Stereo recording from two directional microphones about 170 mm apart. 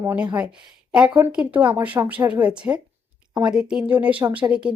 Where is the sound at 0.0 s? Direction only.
15° right (ahead or behind).